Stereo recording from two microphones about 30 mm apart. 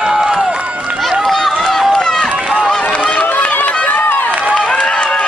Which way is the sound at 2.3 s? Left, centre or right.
Right.